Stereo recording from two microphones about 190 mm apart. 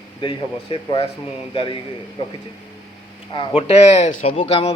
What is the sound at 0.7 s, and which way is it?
Speech, 30° left (ahead or behind).